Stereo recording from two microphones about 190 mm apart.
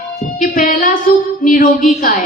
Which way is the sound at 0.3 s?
45° left (ahead or behind).